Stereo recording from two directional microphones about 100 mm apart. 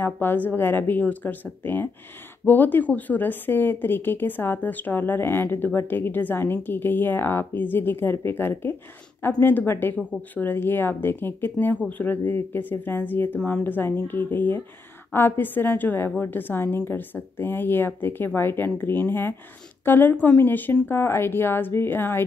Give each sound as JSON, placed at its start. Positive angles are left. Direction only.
{"t": 0.0, "sound": "a woman's voice", "side_deg": 20}